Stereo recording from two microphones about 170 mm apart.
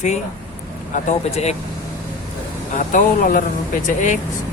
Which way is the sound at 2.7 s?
50° left (ahead or behind).